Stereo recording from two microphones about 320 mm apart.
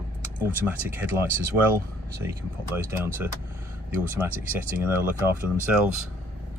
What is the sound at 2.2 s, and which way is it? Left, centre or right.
Speech, centre.